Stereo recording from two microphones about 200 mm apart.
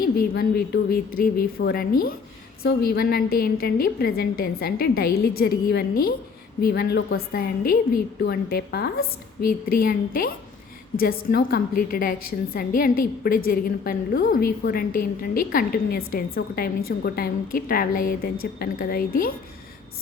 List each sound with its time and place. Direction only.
0.0 s a woman's voice: 50° left (ahead or behind)